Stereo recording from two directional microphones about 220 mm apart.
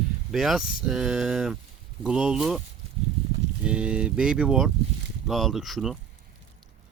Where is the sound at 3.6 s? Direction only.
5° right (ahead or behind).